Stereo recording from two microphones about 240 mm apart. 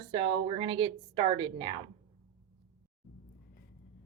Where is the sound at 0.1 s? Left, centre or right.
Right.